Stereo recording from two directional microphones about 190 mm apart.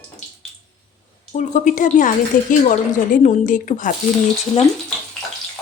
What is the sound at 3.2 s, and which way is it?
Stir, 45° left (ahead or behind).